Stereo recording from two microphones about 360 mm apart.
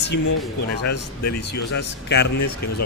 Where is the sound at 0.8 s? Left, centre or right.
Left.